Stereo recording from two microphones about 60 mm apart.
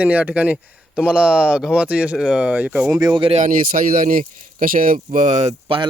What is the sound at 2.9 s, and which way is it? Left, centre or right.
Speech, right.